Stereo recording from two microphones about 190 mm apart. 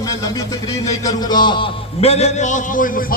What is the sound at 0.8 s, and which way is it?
A man's voice, 20° left (ahead or behind).